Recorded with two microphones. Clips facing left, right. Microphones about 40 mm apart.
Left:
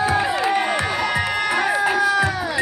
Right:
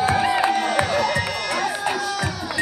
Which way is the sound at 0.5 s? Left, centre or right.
Left.